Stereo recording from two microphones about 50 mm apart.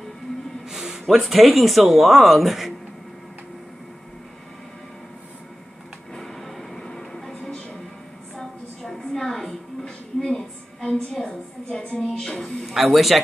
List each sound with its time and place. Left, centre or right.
0.7 s speech: centre
6.1 s train: centre
7.4 s music: centre
8.4 s a sound: centre
11.2 s a woman's voice: centre